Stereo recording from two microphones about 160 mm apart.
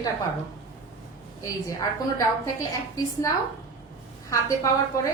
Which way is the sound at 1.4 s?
20° left (ahead or behind).